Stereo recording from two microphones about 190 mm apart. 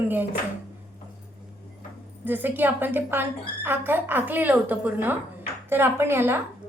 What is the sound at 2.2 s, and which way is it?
A woman's voice, 10° right (ahead or behind).